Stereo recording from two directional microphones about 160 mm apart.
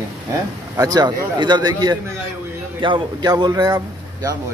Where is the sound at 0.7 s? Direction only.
25° right (ahead or behind).